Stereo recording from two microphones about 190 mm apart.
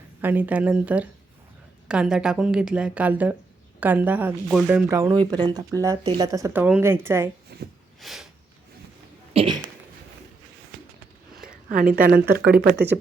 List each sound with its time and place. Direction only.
0.2 s a woman's voice: 10° right (ahead or behind)
7.5 s a sound: 55° right (ahead or behind)
8.0 s a woman's voice: centre (ahead or behind)
9.3 s speech: 30° right (ahead or behind)
11.3 s a sound: 50° right (ahead or behind)
11.9 s speech: 50° right (ahead or behind)